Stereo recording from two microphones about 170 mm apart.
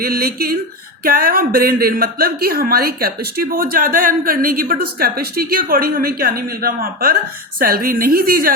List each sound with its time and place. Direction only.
0.0 s speech: 60° right (ahead or behind)